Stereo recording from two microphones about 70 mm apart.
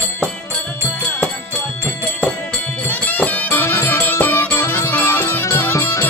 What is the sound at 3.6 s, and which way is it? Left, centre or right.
Music, left.